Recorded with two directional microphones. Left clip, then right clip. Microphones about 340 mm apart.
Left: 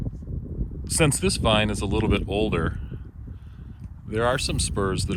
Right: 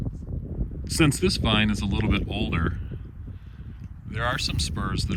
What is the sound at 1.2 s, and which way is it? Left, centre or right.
Speech, centre.